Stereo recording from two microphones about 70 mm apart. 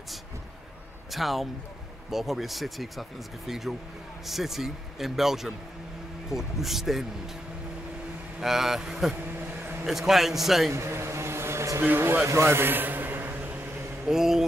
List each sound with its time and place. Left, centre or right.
1.1 s speech: centre
8.4 s speech: centre
9.5 s a sound: right
9.8 s speech: centre
10.7 s vehicle: right
11.8 s speech: right
12.3 s a sound: right
14.0 s speech: centre